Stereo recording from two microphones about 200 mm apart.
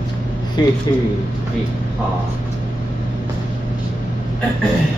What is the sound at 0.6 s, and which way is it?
Speech, 20° left (ahead or behind).